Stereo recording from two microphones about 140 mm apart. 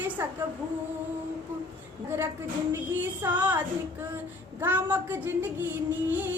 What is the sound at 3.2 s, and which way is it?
Child singing, 10° right (ahead or behind).